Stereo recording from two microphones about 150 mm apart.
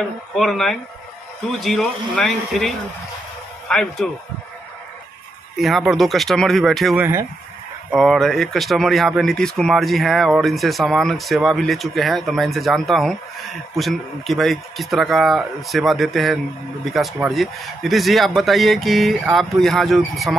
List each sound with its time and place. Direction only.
0.4 s a man's voice: centre (ahead or behind)
5.6 s speech: centre (ahead or behind)
7.0 s speech: 15° right (ahead or behind)
7.9 s speech: centre (ahead or behind)